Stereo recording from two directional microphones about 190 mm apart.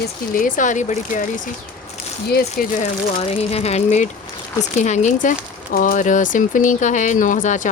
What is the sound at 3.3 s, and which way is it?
Speech, 30° left (ahead or behind).